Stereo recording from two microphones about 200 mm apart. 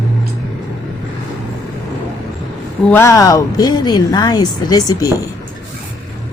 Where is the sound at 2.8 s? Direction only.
10° left (ahead or behind).